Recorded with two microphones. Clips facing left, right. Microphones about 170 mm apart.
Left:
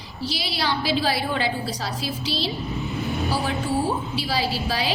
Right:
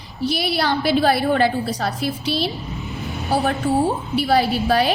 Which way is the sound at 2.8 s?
Centre (ahead or behind).